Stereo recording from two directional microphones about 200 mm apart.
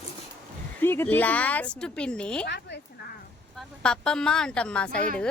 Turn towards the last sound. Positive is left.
turn(degrees=5)  # may be behind; listen again after turning